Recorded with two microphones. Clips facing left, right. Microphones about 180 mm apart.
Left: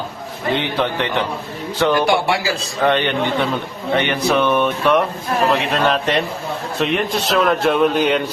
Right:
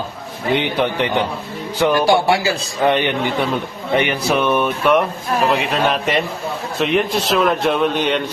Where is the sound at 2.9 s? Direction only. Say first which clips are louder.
Even; 10° right (ahead or behind).